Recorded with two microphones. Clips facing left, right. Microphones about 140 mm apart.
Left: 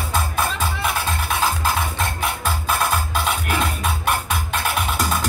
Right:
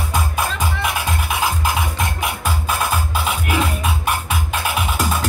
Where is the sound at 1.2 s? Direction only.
15° right (ahead or behind).